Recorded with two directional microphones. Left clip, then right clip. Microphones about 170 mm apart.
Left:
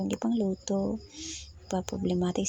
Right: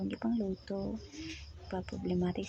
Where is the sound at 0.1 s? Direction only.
30° left (ahead or behind).